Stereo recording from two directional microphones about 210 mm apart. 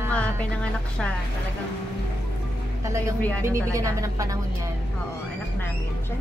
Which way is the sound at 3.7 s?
15° right (ahead or behind).